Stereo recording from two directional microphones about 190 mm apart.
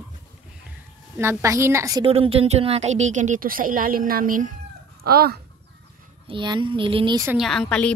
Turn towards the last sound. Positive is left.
turn(degrees=5)  # may be behind; listen again after turning